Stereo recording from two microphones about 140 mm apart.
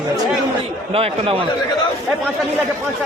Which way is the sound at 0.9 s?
45° right (ahead or behind).